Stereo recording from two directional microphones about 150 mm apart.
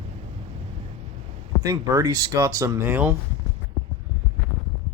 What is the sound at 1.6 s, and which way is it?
Speech, 20° right (ahead or behind).